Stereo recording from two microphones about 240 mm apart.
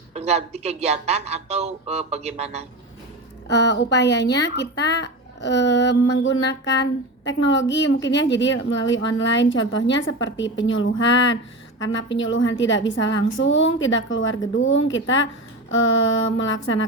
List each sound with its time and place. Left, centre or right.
0.1 s speech: right
3.4 s speech: left